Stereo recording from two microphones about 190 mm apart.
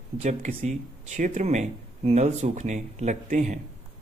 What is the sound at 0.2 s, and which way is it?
Speech, 40° right (ahead or behind).